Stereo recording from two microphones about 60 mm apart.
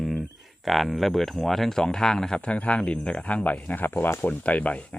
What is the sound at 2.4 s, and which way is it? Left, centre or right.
Speech, left.